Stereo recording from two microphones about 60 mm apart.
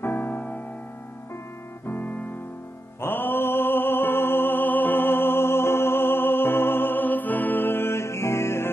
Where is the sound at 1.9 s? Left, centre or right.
Left.